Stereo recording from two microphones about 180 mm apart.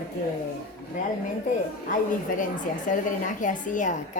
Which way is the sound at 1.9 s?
45° left (ahead or behind).